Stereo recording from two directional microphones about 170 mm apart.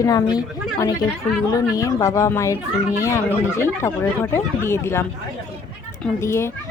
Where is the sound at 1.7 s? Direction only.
20° left (ahead or behind).